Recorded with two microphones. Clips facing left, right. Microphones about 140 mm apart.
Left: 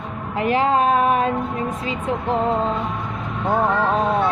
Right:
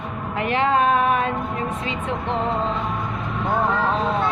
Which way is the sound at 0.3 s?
35° left (ahead or behind).